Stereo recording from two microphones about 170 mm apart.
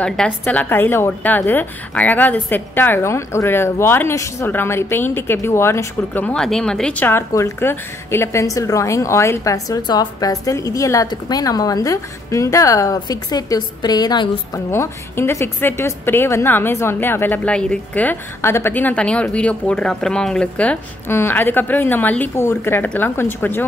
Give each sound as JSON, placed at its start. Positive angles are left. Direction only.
{"t": 0.0, "sound": "a woman's voice", "side_deg": 5}